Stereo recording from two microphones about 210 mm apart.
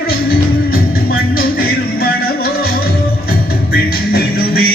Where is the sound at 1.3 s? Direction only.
45° left (ahead or behind).